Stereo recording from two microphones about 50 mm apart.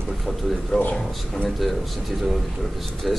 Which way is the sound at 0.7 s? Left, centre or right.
Centre.